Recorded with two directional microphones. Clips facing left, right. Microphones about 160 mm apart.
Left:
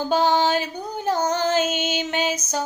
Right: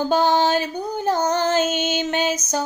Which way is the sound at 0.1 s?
5° left (ahead or behind).